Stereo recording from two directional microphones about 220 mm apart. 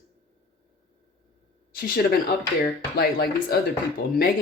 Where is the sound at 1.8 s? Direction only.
40° left (ahead or behind).